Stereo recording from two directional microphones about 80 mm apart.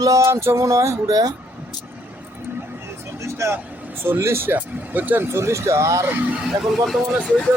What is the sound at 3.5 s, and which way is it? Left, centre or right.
Speech, right.